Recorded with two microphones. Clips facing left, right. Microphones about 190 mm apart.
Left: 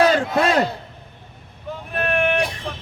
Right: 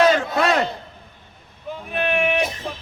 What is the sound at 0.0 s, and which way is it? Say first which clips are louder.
Crowd: even; 30° left (ahead or behind).